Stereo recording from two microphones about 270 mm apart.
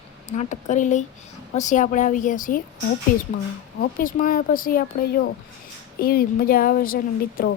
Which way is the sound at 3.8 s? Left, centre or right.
Left.